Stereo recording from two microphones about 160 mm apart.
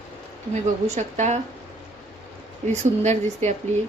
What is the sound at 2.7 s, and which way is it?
Speech, 45° right (ahead or behind).